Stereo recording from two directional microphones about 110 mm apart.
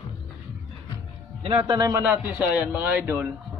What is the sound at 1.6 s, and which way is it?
Speech, 35° right (ahead or behind).